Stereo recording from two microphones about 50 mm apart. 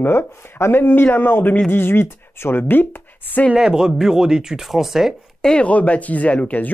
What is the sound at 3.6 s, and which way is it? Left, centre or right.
Speech, centre.